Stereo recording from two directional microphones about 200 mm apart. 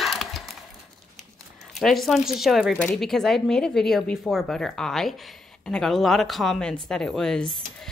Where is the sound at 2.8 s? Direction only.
5° left (ahead or behind).